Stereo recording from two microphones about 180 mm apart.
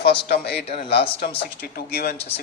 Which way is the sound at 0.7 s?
30° left (ahead or behind).